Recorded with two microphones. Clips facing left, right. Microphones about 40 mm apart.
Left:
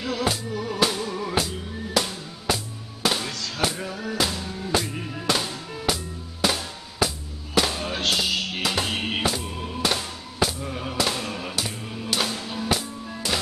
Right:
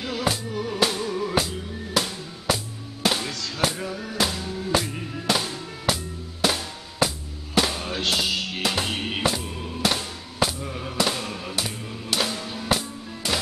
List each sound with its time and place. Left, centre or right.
0.0 s music: centre